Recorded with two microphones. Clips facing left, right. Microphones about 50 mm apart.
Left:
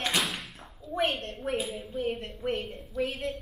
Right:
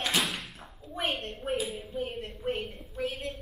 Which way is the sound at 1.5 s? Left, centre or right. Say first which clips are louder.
Even; centre.